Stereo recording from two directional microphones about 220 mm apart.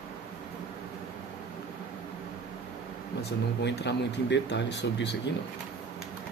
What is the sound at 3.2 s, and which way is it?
Speech, 50° left (ahead or behind).